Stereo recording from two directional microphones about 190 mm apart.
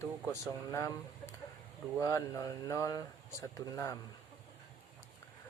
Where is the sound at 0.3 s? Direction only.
15° left (ahead or behind).